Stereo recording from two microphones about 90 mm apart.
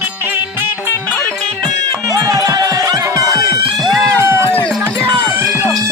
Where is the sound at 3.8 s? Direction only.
Centre (ahead or behind).